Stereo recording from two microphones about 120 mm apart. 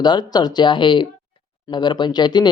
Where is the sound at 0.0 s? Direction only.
35° left (ahead or behind).